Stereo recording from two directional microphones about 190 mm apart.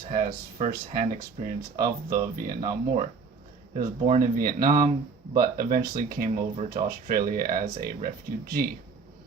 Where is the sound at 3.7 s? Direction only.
40° right (ahead or behind).